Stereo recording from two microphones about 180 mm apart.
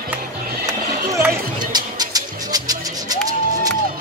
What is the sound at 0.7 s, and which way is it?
Music, 20° right (ahead or behind).